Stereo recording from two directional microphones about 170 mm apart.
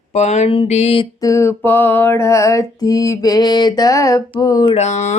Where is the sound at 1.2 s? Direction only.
15° left (ahead or behind).